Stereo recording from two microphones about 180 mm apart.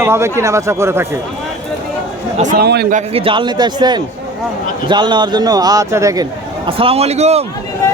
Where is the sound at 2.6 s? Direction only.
60° right (ahead or behind).